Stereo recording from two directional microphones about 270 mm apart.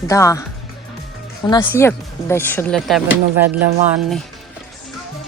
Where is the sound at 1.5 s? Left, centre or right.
Centre.